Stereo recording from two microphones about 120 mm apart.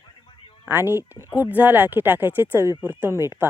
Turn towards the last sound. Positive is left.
turn(degrees=-20)  # may be behind; listen again after turning